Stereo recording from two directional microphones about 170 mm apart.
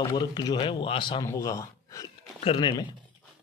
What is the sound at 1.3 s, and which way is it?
Speech, 20° left (ahead or behind).